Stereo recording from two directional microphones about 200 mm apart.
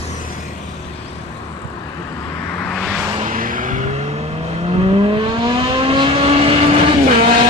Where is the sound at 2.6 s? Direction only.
Centre (ahead or behind).